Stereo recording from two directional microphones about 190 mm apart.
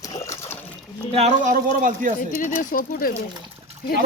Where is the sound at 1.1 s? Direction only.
40° right (ahead or behind).